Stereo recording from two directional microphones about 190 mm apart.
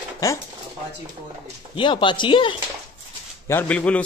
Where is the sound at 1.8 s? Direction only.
25° left (ahead or behind).